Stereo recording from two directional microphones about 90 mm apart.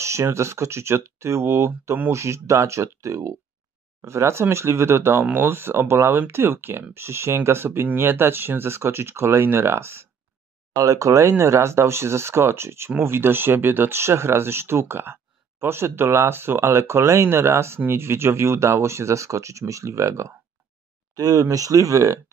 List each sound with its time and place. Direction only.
0.0 s speech: 30° right (ahead or behind)
10.7 s speech: 40° right (ahead or behind)